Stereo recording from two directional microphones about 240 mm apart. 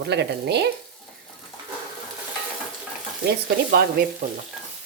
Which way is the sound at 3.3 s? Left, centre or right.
Right.